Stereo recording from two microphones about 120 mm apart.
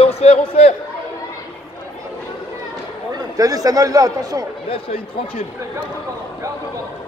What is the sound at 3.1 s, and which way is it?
Speech, 30° right (ahead or behind).